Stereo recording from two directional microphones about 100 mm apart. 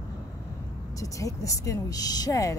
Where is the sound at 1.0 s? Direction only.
35° left (ahead or behind).